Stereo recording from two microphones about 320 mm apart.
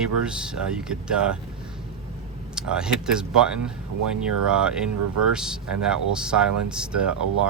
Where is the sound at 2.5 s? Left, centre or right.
Centre.